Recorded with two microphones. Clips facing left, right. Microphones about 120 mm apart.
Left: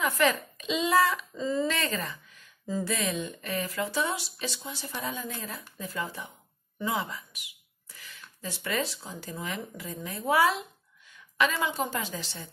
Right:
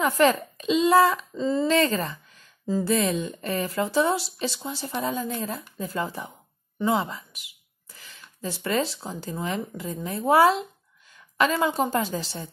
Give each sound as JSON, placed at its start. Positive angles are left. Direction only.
{"t": 0.0, "sound": "speech", "side_deg": -35}